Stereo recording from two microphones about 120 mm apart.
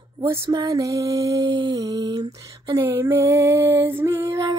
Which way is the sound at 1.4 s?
40° right (ahead or behind).